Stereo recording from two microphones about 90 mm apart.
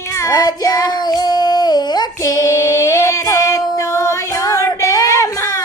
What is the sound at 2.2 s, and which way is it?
Female singing, 40° left (ahead or behind).